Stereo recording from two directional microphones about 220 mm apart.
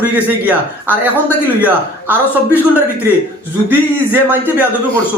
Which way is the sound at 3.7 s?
10° right (ahead or behind).